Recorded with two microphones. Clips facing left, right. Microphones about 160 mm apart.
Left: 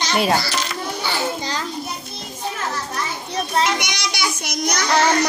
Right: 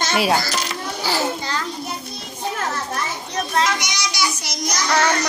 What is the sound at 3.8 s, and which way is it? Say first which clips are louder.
Child singing: right 1 dB; 55° left (ahead or behind).